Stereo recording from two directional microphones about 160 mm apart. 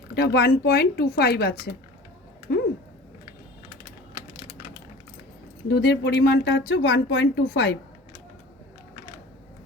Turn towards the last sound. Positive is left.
turn(degrees=85)